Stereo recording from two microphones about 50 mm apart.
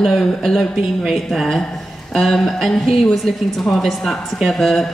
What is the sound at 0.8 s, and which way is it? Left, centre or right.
Speech, centre.